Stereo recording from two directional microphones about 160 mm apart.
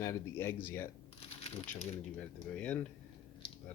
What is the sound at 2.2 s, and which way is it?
Speech, 10° left (ahead or behind).